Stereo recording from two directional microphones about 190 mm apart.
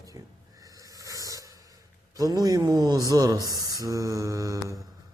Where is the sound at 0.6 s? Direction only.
20° right (ahead or behind).